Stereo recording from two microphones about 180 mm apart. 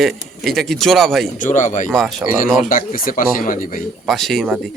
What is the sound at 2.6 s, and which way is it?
Speech, 50° left (ahead or behind).